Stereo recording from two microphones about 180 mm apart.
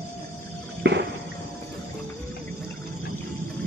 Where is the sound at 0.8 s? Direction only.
75° right (ahead or behind).